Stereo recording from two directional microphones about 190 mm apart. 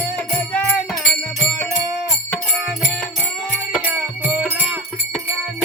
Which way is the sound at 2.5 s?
Centre (ahead or behind).